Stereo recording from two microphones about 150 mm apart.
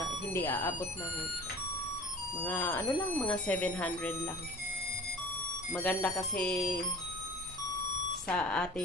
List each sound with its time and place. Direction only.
0.0 s speech: 20° left (ahead or behind)
2.4 s speech: 15° left (ahead or behind)
5.7 s speech: 5° left (ahead or behind)
8.3 s speech: 5° left (ahead or behind)